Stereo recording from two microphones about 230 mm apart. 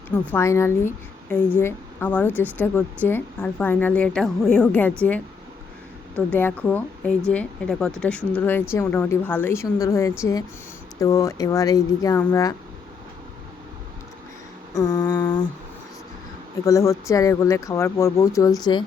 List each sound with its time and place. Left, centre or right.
0.3 s a woman's voice: centre
6.1 s a woman's voice: centre
14.8 s a woman's voice: centre
16.6 s a woman's voice: centre